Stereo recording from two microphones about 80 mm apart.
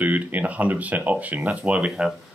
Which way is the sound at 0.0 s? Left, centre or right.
Right.